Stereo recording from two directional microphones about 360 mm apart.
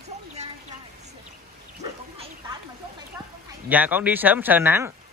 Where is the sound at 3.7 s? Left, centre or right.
Centre.